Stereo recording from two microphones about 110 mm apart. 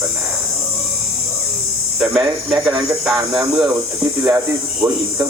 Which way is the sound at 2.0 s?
5° right (ahead or behind).